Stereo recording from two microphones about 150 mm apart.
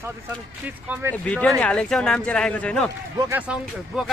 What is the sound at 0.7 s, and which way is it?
Speech, 10° right (ahead or behind).